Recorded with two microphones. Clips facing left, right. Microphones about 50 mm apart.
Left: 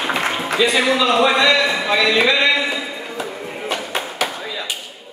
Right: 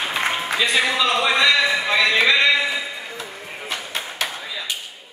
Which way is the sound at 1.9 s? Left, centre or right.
Centre.